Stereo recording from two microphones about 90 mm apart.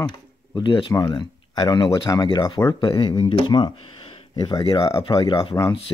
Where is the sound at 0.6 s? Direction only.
60° left (ahead or behind).